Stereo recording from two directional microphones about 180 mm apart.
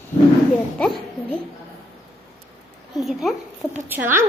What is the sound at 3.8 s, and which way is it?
Speech, 10° right (ahead or behind).